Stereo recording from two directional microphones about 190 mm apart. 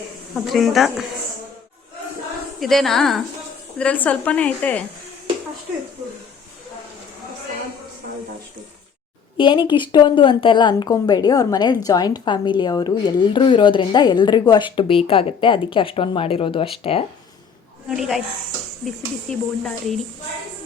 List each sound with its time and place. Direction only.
0.3 s speech: centre (ahead or behind)
2.6 s speech: centre (ahead or behind)
9.4 s speech: 25° left (ahead or behind)
17.8 s speech: centre (ahead or behind)